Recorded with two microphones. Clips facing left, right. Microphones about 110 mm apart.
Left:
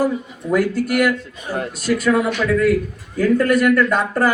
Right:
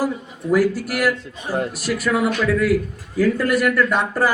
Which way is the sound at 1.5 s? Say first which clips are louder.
Right 2 dB; 30° right (ahead or behind).